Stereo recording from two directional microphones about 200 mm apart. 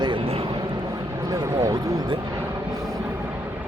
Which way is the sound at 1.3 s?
15° right (ahead or behind).